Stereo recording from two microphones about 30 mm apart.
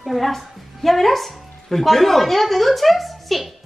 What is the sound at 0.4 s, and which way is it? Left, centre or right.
A woman's voice, centre.